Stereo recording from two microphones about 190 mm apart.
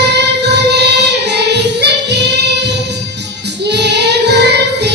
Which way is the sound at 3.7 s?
65° right (ahead or behind).